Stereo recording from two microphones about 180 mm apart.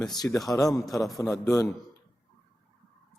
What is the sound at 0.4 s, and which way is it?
A man's voice, 20° left (ahead or behind).